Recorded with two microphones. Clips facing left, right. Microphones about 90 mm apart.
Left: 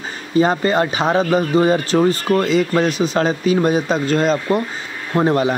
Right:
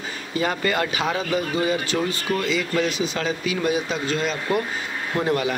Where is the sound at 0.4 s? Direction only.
30° left (ahead or behind).